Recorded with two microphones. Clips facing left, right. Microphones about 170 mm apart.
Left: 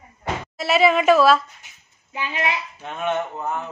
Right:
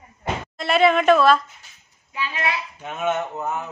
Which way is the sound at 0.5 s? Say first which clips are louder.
Even; 5° left (ahead or behind).